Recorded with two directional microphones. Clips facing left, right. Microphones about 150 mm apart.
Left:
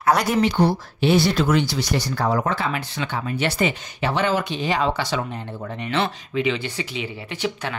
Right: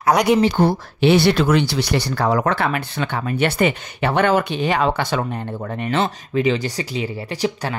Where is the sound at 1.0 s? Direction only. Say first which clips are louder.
Right 4 dB; 70° right (ahead or behind).